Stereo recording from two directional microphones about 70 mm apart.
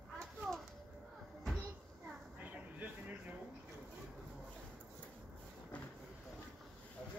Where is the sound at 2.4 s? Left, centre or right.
Right.